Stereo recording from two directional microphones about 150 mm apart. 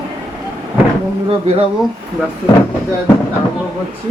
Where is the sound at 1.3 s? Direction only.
40° right (ahead or behind).